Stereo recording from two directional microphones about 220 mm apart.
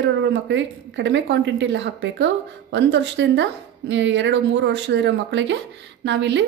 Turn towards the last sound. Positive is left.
turn(degrees=-55)  # may be behind; listen again after turning